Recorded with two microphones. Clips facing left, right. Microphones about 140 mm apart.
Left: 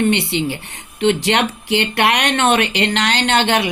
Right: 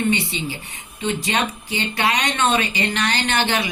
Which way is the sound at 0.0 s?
70° left (ahead or behind).